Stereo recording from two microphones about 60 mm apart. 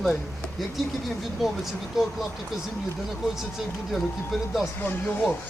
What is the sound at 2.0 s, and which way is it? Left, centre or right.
Speech, centre.